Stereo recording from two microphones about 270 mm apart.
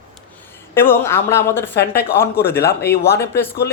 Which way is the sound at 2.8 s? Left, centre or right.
Left.